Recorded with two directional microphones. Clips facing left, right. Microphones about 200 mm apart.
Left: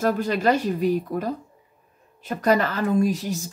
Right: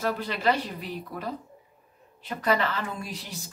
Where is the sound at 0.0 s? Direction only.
45° left (ahead or behind).